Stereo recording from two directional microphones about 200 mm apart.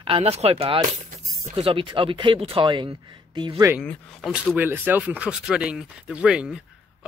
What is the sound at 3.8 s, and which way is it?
Speech, centre (ahead or behind).